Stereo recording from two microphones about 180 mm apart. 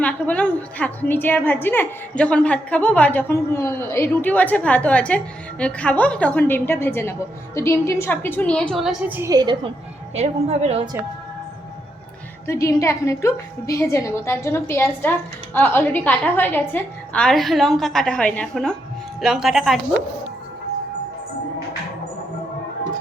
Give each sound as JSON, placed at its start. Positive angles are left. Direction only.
{"t": 0.0, "sound": "a woman's voice", "side_deg": 5}
{"t": 9.3, "sound": "a woman's voice", "side_deg": -25}
{"t": 10.2, "sound": "a woman's voice", "side_deg": -35}
{"t": 12.5, "sound": "a woman's voice", "side_deg": 15}